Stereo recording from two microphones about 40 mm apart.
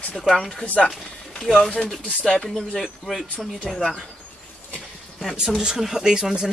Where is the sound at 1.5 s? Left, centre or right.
Centre.